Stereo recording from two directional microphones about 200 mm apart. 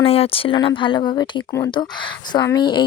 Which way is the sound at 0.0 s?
30° left (ahead or behind).